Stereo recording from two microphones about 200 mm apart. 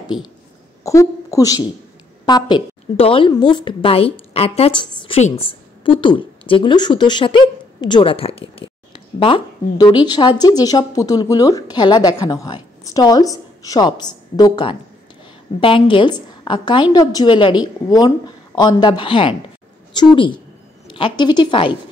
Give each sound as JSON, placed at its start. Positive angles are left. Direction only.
{"t": 0.1, "sound": "a woman's voice", "side_deg": 0}
{"t": 0.8, "sound": "a woman's voice", "side_deg": 15}